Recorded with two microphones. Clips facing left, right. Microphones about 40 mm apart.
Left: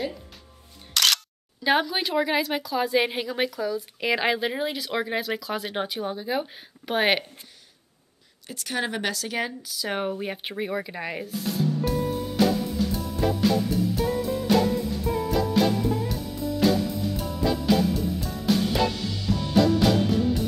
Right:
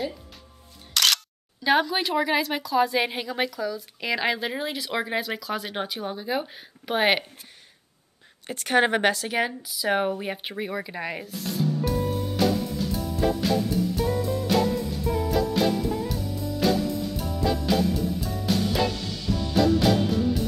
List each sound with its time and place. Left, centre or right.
0.9 s speech: centre
8.5 s a woman's voice: right
9.3 s speech: centre
12.4 s music: centre